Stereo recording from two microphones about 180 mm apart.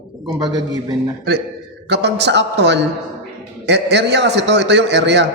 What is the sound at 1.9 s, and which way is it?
A man's voice, 70° right (ahead or behind).